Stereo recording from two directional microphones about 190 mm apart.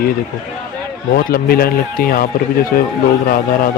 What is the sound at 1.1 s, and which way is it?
Speech, 50° left (ahead or behind).